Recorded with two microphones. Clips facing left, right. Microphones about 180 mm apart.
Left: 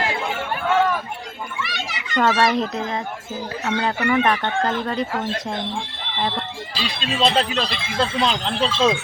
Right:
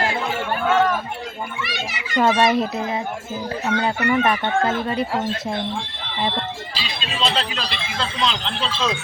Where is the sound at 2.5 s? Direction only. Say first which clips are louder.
Right 1 dB; 5° right (ahead or behind).